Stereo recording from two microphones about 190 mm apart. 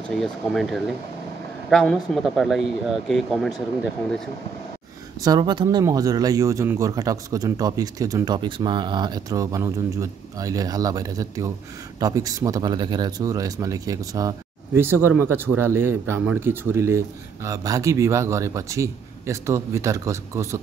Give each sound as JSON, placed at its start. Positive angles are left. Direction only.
{"t": 0.1, "sound": "speech", "side_deg": 0}
{"t": 5.2, "sound": "speech", "side_deg": -20}